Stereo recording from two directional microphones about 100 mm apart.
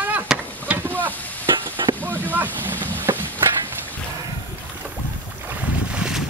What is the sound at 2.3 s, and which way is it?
Speech, 20° right (ahead or behind).